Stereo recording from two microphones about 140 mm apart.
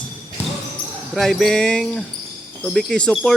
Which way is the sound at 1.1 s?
5° left (ahead or behind).